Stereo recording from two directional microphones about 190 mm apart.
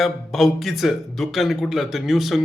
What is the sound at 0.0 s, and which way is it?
Speech, centre (ahead or behind).